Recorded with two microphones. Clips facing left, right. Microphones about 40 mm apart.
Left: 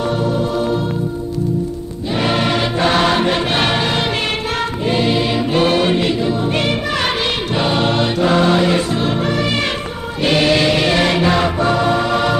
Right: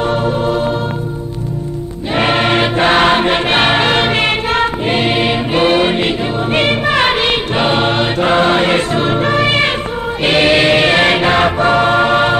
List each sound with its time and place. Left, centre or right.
0.1 s music: right
2.1 s music: right
10.2 s choir: right